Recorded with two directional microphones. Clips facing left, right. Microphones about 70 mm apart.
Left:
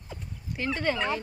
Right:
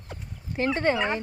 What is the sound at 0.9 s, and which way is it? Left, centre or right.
Speech, right.